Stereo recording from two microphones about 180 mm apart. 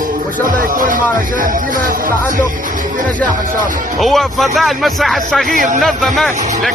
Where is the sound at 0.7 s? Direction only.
50° right (ahead or behind).